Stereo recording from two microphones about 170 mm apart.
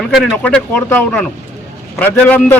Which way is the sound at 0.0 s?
5° left (ahead or behind).